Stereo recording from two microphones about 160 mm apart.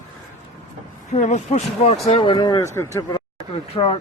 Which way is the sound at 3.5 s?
35° left (ahead or behind).